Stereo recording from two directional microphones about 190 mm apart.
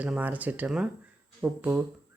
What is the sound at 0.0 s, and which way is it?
Speech, 10° right (ahead or behind).